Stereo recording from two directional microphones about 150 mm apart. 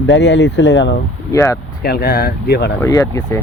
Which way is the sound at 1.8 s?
90° left.